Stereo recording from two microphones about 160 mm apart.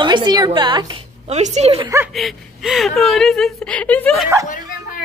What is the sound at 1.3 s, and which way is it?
Speech, 45° right (ahead or behind).